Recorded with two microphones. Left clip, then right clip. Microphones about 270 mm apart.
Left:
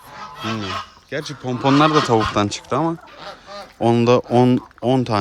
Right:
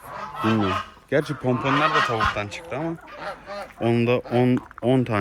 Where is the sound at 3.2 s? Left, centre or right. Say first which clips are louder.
Right 1 dB; right.